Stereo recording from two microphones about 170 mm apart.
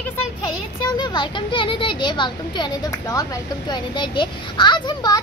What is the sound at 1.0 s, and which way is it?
Speech, 25° left (ahead or behind).